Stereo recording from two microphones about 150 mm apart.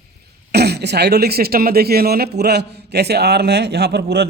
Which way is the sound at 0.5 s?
90° right.